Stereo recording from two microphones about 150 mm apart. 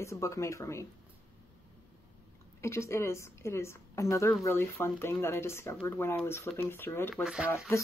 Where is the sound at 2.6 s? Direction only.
20° left (ahead or behind).